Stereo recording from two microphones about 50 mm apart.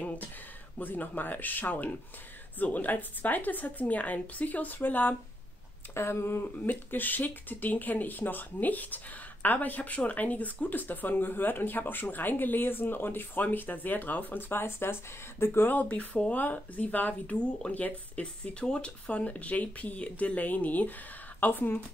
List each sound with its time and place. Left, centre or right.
0.7 s speech: left
5.9 s speech: left
15.7 s speech: left
17.4 s speech: left